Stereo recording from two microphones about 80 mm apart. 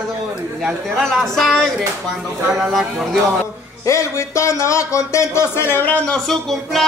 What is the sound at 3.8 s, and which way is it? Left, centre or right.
Speech, left.